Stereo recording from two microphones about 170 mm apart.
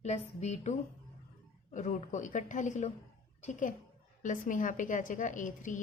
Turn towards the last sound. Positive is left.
turn(degrees=50)  # may be behind; listen again after turning